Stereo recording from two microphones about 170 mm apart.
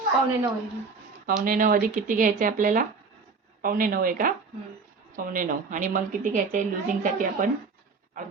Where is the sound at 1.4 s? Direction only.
55° right (ahead or behind).